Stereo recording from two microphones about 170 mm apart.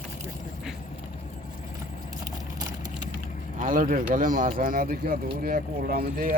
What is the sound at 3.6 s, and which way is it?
Speech, 50° right (ahead or behind).